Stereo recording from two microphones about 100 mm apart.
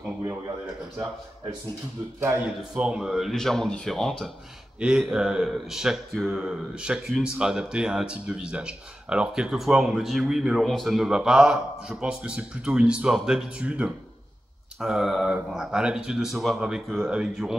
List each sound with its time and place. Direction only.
2.4 s speech: 10° right (ahead or behind)
4.7 s speech: 10° right (ahead or behind)